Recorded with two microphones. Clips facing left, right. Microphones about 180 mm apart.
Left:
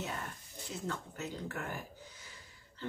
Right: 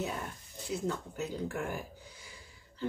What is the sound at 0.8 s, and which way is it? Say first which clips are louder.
Speech: right 3 dB; 10° right (ahead or behind).